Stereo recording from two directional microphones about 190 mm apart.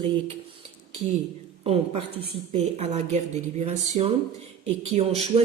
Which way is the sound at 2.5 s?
35° right (ahead or behind).